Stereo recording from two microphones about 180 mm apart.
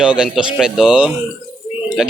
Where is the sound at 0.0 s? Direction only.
5° right (ahead or behind).